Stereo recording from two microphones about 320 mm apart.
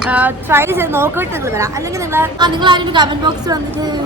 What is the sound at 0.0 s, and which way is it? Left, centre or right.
A woman's voice, centre.